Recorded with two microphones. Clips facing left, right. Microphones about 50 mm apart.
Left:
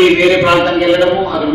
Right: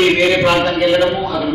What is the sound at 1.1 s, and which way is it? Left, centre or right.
Speech, left.